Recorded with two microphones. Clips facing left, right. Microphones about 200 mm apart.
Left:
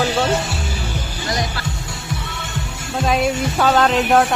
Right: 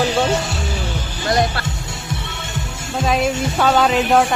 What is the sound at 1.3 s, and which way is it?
Music, 55° right (ahead or behind).